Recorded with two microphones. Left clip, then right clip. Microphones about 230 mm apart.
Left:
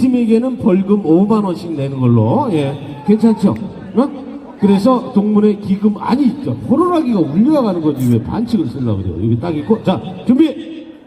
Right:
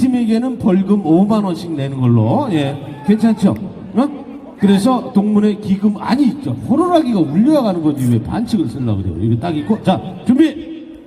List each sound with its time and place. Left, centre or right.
0.0 s a man's voice: right
4.6 s a man's voice: right